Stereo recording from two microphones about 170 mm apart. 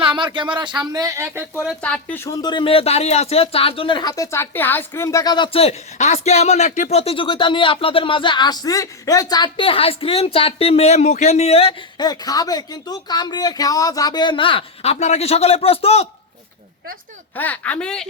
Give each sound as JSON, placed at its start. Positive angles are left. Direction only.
{"t": 0.0, "sound": "a sound", "side_deg": -30}
{"t": 0.3, "sound": "speech", "side_deg": -25}
{"t": 1.8, "sound": "speech", "side_deg": 10}
{"t": 2.4, "sound": "speech", "side_deg": 25}
{"t": 11.9, "sound": "speech", "side_deg": 25}
{"t": 17.3, "sound": "speech", "side_deg": 10}